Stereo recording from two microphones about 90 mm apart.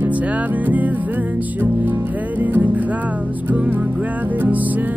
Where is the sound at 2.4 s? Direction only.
20° right (ahead or behind).